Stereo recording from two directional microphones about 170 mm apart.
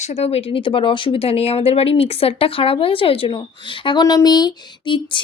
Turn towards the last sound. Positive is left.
turn(degrees=30)  # may be behind; listen again after turning